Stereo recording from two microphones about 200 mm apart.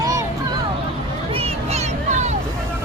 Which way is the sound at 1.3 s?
30° right (ahead or behind).